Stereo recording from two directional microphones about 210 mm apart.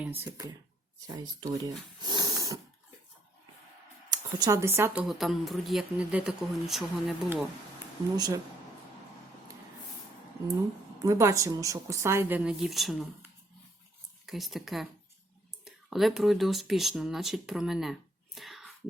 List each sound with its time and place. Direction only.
0.0 s speech: 10° right (ahead or behind)
4.4 s a woman's voice: 15° right (ahead or behind)
5.0 s speech: centre (ahead or behind)
8.1 s speech: 20° right (ahead or behind)
11.0 s a woman's voice: 15° right (ahead or behind)
18.3 s whispering: centre (ahead or behind)